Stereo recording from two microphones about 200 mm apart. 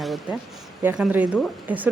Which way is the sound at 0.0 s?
Centre (ahead or behind).